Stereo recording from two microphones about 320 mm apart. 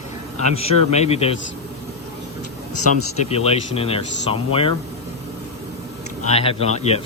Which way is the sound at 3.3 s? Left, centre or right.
Centre.